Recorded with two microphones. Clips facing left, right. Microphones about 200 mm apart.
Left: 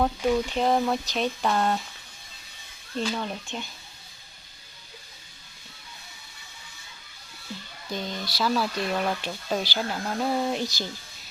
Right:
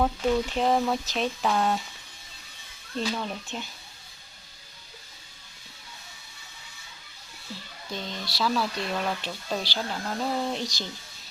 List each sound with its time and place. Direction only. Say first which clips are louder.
0.0 s speech: left 1 dB; 5° left (ahead or behind)
2.9 s speech: left 1 dB; centre (ahead or behind)
7.9 s speech: left 3 dB; 5° left (ahead or behind)